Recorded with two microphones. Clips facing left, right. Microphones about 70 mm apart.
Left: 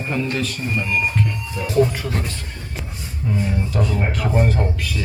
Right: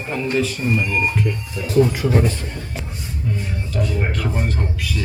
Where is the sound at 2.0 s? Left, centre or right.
Centre.